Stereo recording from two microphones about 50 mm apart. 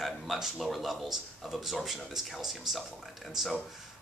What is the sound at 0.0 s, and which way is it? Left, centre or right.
Speech, centre.